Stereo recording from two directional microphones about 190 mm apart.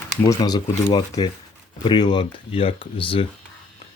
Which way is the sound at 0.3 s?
20° left (ahead or behind).